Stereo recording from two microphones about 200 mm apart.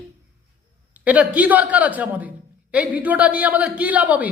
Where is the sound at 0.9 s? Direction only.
5° right (ahead or behind).